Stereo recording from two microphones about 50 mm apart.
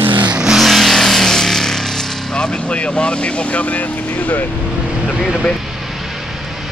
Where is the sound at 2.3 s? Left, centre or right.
Left.